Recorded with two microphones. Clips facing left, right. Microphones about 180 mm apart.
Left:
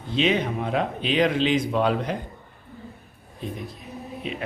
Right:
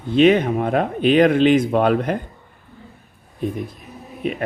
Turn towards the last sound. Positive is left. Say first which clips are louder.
# right 8 dB
turn(degrees=-55)  # may be behind; listen again after turning